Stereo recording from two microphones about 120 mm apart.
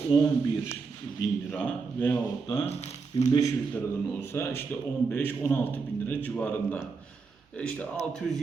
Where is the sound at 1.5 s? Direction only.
10° left (ahead or behind).